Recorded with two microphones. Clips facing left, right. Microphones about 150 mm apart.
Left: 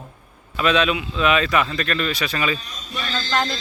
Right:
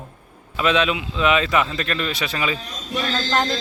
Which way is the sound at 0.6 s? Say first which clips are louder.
Even; 20° right (ahead or behind).